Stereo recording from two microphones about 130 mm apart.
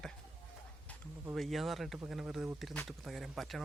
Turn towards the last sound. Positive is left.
turn(degrees=0)  # may be behind; listen again after turning